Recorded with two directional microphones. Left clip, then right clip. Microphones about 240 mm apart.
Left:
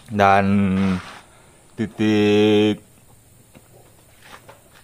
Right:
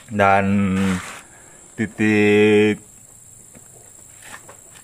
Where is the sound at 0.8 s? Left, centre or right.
Right.